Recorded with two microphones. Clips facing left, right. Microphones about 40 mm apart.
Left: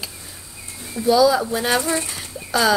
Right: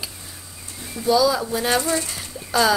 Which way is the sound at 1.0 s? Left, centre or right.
Centre.